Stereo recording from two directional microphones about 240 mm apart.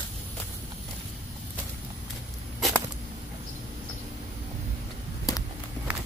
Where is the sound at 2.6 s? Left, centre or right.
Centre.